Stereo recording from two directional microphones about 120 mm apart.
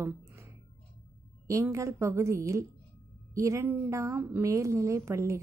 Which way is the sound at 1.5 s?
25° right (ahead or behind).